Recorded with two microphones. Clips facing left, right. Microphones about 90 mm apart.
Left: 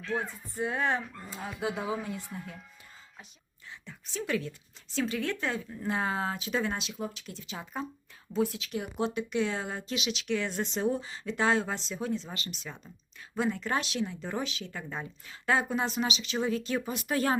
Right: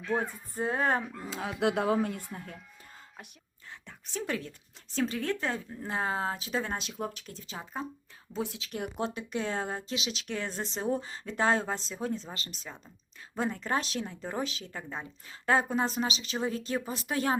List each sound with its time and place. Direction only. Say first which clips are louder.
0.2 s speech: right 1 dB; 35° right (ahead or behind)
1.3 s speech: right 5 dB; 90° right; by 2.6 s 50° right (ahead or behind)
3.7 s a woman's voice: right 1 dB; 50° right (ahead or behind); by 8.7 s 25° right (ahead or behind)
8.7 s speech: left 2 dB; 45° right (ahead or behind); by 17.3 s 20° right (ahead or behind)